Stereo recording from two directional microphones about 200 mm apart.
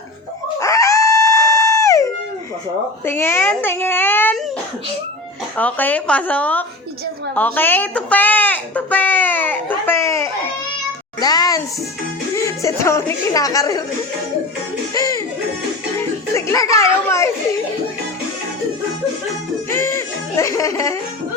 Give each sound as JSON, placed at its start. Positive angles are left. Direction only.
{"t": 0.6, "sound": "dog", "side_deg": 15}
{"t": 3.1, "sound": "a sound", "side_deg": 10}
{"t": 5.5, "sound": "a woman's voice", "side_deg": 10}
{"t": 7.3, "sound": "a sound", "side_deg": 10}
{"t": 11.2, "sound": "a woman's voice", "side_deg": 20}
{"t": 14.9, "sound": "music", "side_deg": 20}
{"t": 19.8, "sound": "music", "side_deg": 15}